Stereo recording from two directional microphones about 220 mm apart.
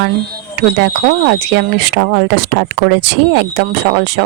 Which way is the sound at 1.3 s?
50° right (ahead or behind).